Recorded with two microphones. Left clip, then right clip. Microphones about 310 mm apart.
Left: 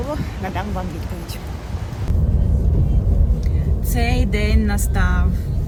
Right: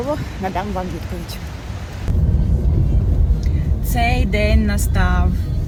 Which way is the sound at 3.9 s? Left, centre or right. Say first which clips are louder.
Right 4 dB; centre.